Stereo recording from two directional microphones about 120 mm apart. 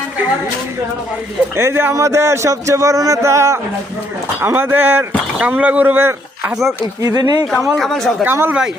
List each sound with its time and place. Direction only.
1.5 s speech: 20° right (ahead or behind)
6.5 s speech: centre (ahead or behind)
7.0 s speech: 30° right (ahead or behind)
7.8 s speech: 5° left (ahead or behind)
8.2 s speech: 15° right (ahead or behind)